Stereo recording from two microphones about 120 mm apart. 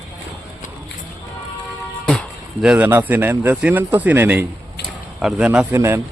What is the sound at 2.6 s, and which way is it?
Speech, 10° right (ahead or behind).